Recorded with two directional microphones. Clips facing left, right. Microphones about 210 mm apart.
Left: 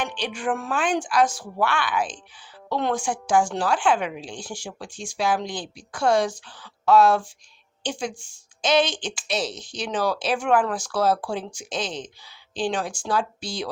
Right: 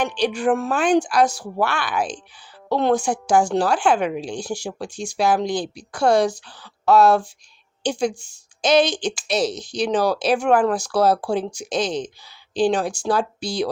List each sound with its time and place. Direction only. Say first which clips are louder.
0.0 s a woman's voice: right 7 dB; 40° right (ahead or behind)